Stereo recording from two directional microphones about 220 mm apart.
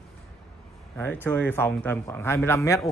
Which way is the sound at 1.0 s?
10° left (ahead or behind).